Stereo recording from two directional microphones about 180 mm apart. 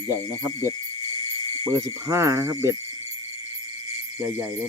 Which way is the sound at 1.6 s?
15° right (ahead or behind).